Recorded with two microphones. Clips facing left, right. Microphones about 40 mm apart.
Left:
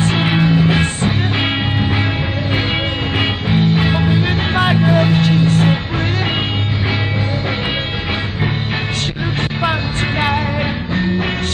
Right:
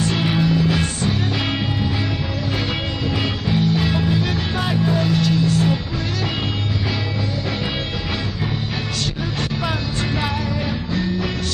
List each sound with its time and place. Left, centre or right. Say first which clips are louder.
0.0 s music: left 4 dB; left
3.2 s music: left 5 dB; left